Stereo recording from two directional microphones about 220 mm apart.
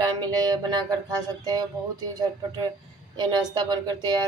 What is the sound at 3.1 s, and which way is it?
Speech, 20° right (ahead or behind).